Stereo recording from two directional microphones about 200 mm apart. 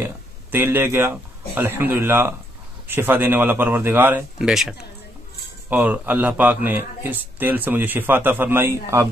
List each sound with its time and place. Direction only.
0.0 s a man's voice: 10° right (ahead or behind)